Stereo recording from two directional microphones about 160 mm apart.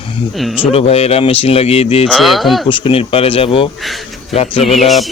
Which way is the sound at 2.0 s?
Centre (ahead or behind).